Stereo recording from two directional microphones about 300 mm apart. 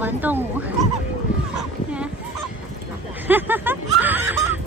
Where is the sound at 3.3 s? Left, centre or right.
Centre.